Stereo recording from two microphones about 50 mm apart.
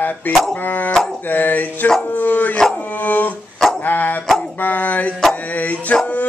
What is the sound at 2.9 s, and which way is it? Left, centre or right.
Dog, left.